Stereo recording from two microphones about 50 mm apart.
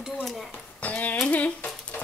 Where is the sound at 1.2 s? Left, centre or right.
Left.